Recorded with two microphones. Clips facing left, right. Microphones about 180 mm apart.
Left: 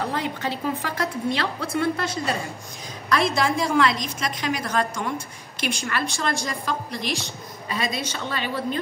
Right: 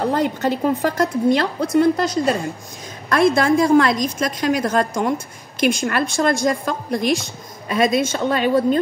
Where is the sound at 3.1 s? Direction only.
50° right (ahead or behind).